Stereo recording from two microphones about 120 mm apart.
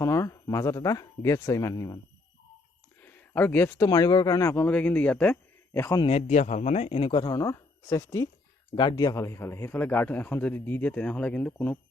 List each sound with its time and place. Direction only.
0.0 s speech: 25° left (ahead or behind)
3.0 s a sound: 15° left (ahead or behind)
3.8 s speech: 30° left (ahead or behind); by 5.9 s 15° left (ahead or behind)
6.1 s speech: 70° left (ahead or behind)
7.1 s speech: 40° left (ahead or behind)
7.3 s speech: 25° left (ahead or behind)
8.7 s a man's voice: 40° left (ahead or behind); by 11.8 s 15° left (ahead or behind)